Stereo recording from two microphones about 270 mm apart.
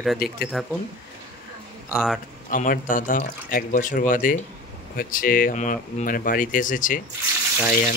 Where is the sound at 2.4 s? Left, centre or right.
Left.